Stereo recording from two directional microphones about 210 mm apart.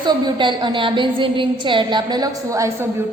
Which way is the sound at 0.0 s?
20° right (ahead or behind).